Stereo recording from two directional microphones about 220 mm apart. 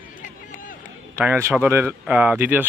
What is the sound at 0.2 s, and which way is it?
Run, 40° left (ahead or behind).